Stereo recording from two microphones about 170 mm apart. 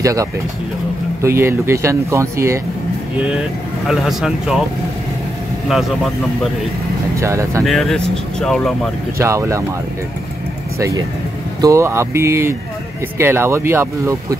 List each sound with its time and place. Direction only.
0.0 s speech: 20° right (ahead or behind)
3.8 s speech: centre (ahead or behind)
7.2 s speech: 15° right (ahead or behind)
7.6 s speech: centre (ahead or behind)
9.2 s speech: 15° right (ahead or behind)
10.8 s speech: 20° right (ahead or behind)